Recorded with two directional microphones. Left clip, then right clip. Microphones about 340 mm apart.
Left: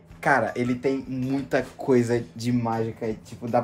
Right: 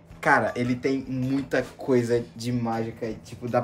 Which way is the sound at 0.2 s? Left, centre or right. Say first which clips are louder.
Even; centre.